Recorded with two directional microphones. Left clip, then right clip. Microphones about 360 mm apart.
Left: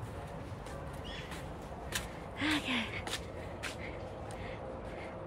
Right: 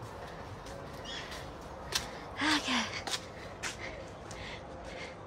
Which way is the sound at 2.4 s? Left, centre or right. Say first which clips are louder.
Right 3 dB; centre.